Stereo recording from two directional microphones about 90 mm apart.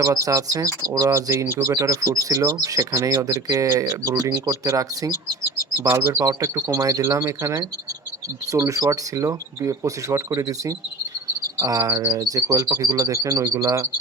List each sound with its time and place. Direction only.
0.0 s speech: 40° right (ahead or behind)
6.1 s speech: 35° right (ahead or behind)